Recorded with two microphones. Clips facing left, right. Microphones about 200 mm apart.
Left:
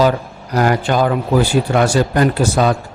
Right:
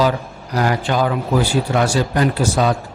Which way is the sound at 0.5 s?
50° left (ahead or behind).